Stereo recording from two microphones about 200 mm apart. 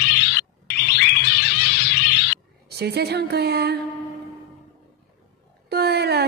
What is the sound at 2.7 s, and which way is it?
A woman's voice, 55° right (ahead or behind).